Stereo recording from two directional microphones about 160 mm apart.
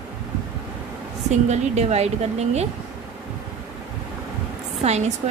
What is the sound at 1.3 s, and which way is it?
A woman's voice, 45° right (ahead or behind).